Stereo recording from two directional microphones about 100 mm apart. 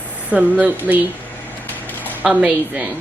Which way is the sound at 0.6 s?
15° right (ahead or behind).